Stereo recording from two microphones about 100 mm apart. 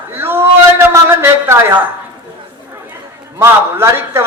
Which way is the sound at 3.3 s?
25° right (ahead or behind).